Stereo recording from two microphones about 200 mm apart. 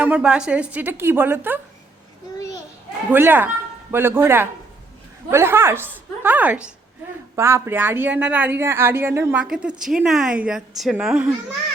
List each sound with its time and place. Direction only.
0.0 s a woman's voice: 5° right (ahead or behind)
3.1 s a woman's voice: 10° right (ahead or behind)